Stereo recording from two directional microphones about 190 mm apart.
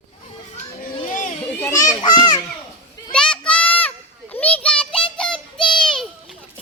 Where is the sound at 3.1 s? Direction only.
5° left (ahead or behind).